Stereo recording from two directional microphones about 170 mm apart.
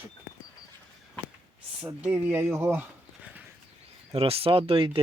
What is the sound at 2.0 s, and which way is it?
Speech, 10° right (ahead or behind).